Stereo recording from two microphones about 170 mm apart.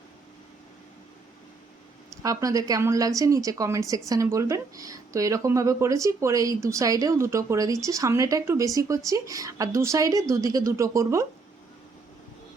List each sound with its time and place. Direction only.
2.2 s speech: 20° right (ahead or behind)